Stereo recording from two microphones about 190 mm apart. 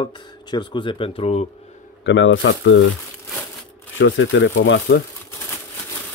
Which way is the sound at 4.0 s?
75° left (ahead or behind).